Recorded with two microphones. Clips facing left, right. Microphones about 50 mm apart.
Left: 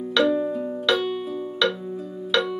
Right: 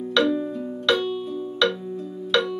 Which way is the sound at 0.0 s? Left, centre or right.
Centre.